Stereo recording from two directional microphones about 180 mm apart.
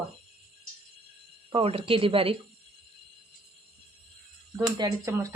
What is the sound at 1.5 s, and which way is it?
Speech, 30° right (ahead or behind).